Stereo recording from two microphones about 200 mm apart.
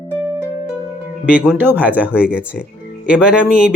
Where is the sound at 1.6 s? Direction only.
10° right (ahead or behind).